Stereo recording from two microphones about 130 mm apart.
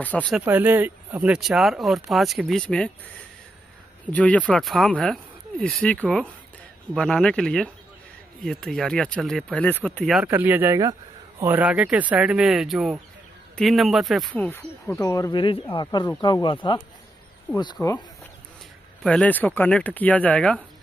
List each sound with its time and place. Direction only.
0.0 s speech: 10° left (ahead or behind)
0.5 s speech: 15° right (ahead or behind); by 2.9 s 10° left (ahead or behind)
4.1 s speech: 10° left (ahead or behind)
10.2 s speech: 15° right (ahead or behind)
10.8 s a sound: 30° right (ahead or behind)
11.4 s speech: 10° right (ahead or behind)
14.3 s speech: 10° left (ahead or behind)
14.9 s speech: 25° left (ahead or behind)
15.3 s speech: 40° left (ahead or behind)
17.8 s speech: 10° left (ahead or behind)
19.0 s speech: 10° left (ahead or behind)